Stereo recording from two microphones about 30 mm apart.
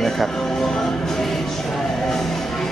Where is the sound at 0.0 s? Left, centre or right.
Centre.